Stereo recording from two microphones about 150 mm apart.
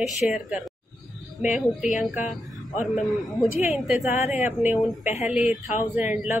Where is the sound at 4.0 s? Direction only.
50° left (ahead or behind).